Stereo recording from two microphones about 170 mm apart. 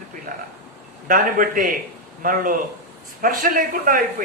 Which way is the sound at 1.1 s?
55° right (ahead or behind).